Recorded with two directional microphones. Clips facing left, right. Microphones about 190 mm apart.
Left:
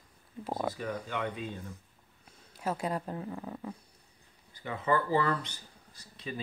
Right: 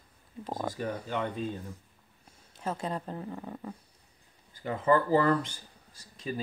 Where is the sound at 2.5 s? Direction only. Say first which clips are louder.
Left 1 dB; 10° left (ahead or behind).